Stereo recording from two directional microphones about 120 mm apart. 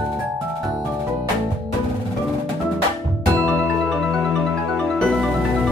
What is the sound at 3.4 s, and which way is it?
Music, centre (ahead or behind).